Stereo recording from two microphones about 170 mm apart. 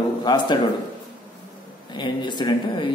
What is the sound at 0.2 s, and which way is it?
Speech, 25° left (ahead or behind).